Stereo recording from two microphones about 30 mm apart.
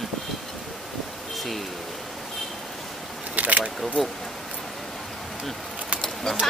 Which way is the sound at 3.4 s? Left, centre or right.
Right.